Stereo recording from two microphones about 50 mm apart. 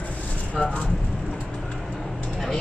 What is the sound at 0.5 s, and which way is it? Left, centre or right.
Speech, left.